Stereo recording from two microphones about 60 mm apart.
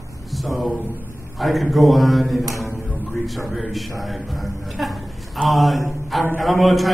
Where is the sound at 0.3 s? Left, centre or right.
Centre.